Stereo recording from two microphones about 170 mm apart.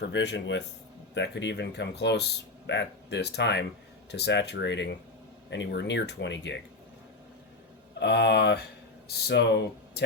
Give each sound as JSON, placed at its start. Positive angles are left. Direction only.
{"t": 0.1, "sound": "speech", "side_deg": 90}
{"t": 7.9, "sound": "speech", "side_deg": 80}